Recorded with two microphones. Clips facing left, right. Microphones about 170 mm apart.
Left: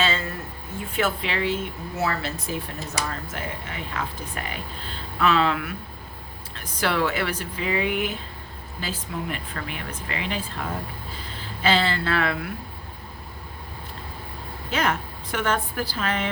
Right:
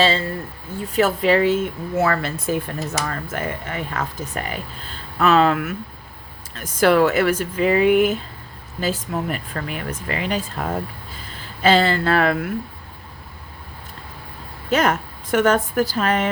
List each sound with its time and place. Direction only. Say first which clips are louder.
0.0 s speech: right 6 dB; 30° right (ahead or behind); by 12.5 s 45° right (ahead or behind)
14.7 s speech: right 6 dB; 45° right (ahead or behind)